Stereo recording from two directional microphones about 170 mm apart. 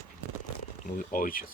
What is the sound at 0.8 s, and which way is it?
Speech, 55° left (ahead or behind).